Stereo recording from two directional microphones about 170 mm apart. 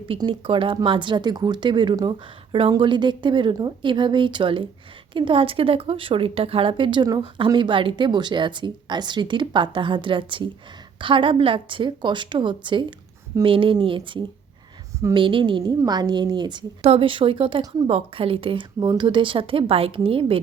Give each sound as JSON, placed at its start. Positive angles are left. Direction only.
{"t": 0.1, "sound": "a woman's voice", "side_deg": -30}